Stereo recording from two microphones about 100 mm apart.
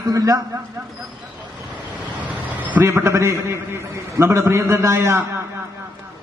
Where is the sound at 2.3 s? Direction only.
15° right (ahead or behind).